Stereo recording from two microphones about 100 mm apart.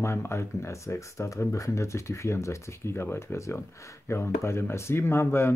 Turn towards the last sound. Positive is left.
turn(degrees=25)  # may be behind; listen again after turning